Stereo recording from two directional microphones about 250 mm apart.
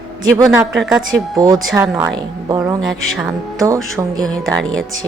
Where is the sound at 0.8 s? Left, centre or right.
Centre.